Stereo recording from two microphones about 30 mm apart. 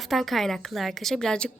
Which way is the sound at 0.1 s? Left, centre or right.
Centre.